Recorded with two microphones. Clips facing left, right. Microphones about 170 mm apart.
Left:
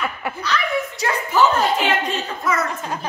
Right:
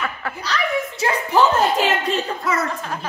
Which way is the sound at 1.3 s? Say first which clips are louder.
Right 1 dB; 35° right (ahead or behind).